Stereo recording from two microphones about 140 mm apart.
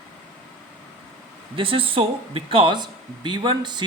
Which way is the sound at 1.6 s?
40° right (ahead or behind).